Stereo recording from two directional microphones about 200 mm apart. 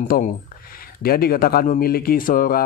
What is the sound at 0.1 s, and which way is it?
Speech, 45° left (ahead or behind).